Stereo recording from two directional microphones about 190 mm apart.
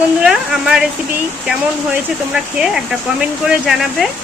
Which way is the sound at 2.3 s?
5° right (ahead or behind).